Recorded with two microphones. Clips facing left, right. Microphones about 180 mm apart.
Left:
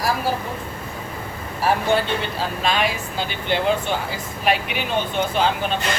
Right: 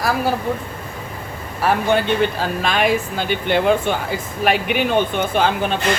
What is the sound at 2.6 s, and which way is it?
Speech, 55° right (ahead or behind).